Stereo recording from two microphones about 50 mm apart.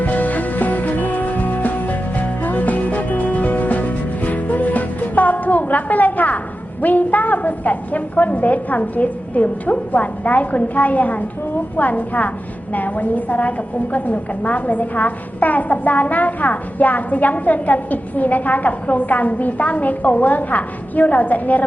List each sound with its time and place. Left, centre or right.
0.0 s music: left
6.8 s a woman's voice: left